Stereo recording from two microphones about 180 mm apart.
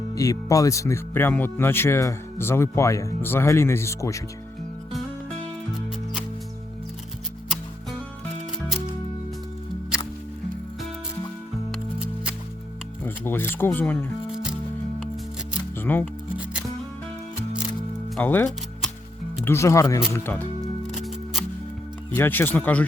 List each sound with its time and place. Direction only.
0.1 s speech: 20° left (ahead or behind)
11.7 s music: 5° right (ahead or behind)
13.0 s speech: 10° left (ahead or behind)
15.8 s speech: 10° left (ahead or behind)
18.1 s speech: 10° left (ahead or behind)
20.9 s music: centre (ahead or behind)
22.1 s speech: 10° left (ahead or behind)